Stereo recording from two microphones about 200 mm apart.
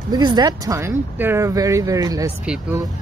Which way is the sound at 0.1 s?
20° right (ahead or behind).